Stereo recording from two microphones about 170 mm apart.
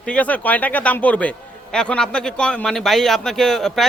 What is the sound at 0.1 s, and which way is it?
Speech, 10° left (ahead or behind).